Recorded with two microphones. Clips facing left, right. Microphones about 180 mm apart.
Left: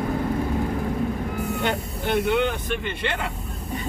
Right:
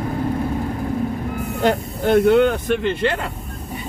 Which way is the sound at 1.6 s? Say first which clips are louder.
Right 7 dB; 45° right (ahead or behind).